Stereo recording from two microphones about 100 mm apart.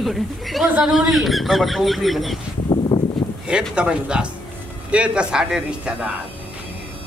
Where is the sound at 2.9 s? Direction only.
45° left (ahead or behind).